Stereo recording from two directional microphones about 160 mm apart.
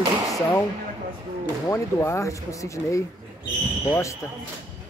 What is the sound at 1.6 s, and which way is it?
Speech, 20° left (ahead or behind).